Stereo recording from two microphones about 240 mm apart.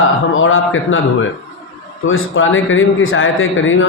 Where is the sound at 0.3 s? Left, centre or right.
Left.